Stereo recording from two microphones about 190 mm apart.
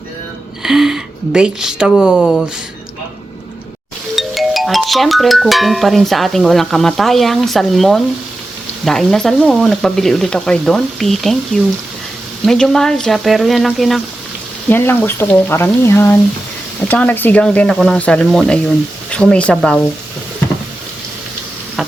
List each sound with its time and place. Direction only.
0.6 s a woman's voice: 5° right (ahead or behind)
4.1 s speech: centre (ahead or behind)
14.7 s speech: 10° left (ahead or behind)